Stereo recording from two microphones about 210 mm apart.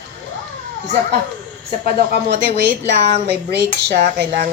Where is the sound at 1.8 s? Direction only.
50° right (ahead or behind).